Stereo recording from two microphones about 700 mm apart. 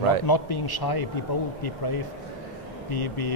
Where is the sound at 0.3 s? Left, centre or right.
Left.